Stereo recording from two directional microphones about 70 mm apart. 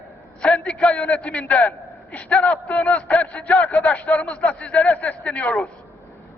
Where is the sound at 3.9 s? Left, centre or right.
Centre.